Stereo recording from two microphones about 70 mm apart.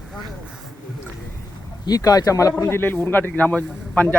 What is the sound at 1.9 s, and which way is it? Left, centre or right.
Speech, left.